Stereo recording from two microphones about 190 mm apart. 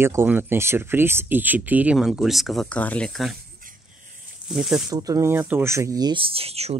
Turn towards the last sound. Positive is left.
turn(degrees=-30)  # may be behind; listen again after turning